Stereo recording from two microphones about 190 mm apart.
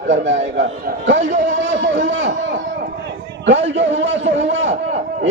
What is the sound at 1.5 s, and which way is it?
Speech, 70° right (ahead or behind).